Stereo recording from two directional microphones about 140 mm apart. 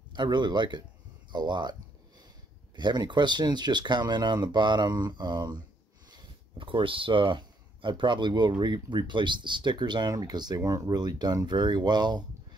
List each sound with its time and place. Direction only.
0.1 s speech: 35° right (ahead or behind)